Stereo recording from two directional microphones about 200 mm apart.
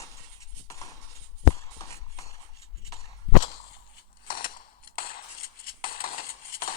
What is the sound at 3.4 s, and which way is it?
Whip, 30° left (ahead or behind).